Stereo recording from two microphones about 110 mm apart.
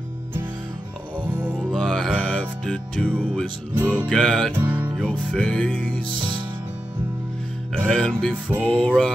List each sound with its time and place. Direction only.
1.2 s music: 15° right (ahead or behind)
1.6 s music: 5° left (ahead or behind)
3.7 s music: 15° right (ahead or behind)
4.1 s music: 5° left (ahead or behind)
4.6 s music: 20° right (ahead or behind)
5.0 s music: 10° left (ahead or behind)
7.9 s music: 10° left (ahead or behind)